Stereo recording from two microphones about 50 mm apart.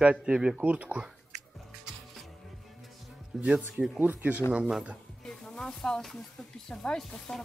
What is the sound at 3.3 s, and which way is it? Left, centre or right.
Speech, centre.